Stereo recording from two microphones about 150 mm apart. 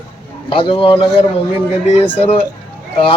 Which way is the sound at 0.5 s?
35° left (ahead or behind).